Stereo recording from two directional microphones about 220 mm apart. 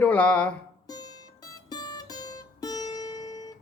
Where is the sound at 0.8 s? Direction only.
20° left (ahead or behind).